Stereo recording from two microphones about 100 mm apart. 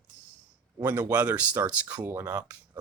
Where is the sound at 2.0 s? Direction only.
25° right (ahead or behind).